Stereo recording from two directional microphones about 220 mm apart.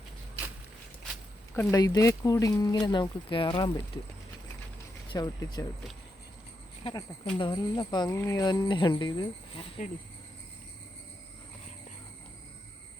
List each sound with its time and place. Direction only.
1.5 s speech: 15° left (ahead or behind)
5.1 s speech: 15° left (ahead or behind)
6.8 s speech: 25° left (ahead or behind)